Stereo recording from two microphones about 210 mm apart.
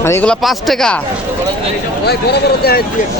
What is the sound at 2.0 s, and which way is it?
Speech, 50° left (ahead or behind).